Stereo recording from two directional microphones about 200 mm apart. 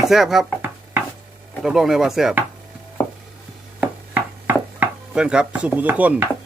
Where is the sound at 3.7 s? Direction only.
10° right (ahead or behind).